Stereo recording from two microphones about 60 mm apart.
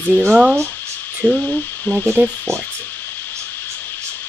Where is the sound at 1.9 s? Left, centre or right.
Left.